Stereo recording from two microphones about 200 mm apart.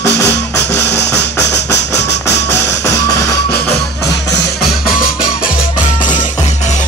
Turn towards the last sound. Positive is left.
turn(degrees=45)  # may be behind; listen again after turning